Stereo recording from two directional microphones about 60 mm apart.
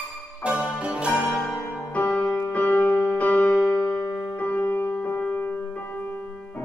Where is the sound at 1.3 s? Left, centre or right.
Centre.